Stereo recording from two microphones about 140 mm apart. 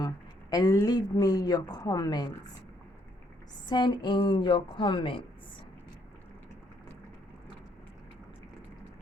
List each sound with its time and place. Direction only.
0.5 s a woman's voice: 25° left (ahead or behind)
3.7 s a woman's voice: 30° left (ahead or behind)